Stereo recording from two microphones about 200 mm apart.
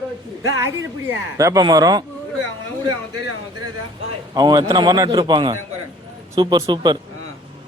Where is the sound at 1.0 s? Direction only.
15° right (ahead or behind).